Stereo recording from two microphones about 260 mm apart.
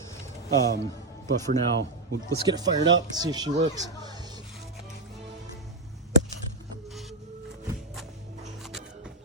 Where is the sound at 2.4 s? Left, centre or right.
Centre.